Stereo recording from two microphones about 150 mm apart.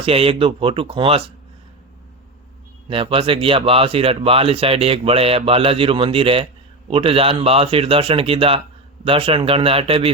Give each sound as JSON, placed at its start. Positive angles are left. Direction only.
{"t": 0.0, "sound": "speech", "side_deg": -40}
{"t": 2.9, "sound": "speech", "side_deg": -35}